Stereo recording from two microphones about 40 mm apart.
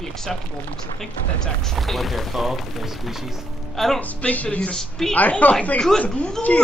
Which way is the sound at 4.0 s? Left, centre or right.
Left.